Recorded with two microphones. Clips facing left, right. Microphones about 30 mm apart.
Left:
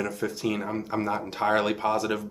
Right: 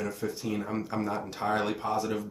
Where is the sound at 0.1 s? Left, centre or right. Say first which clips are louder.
Left 4 dB; left.